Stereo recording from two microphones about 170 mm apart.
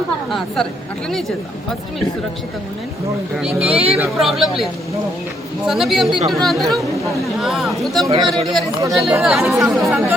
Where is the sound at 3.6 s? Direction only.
35° right (ahead or behind).